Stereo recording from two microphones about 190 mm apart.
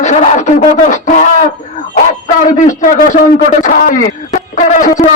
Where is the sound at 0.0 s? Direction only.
35° left (ahead or behind).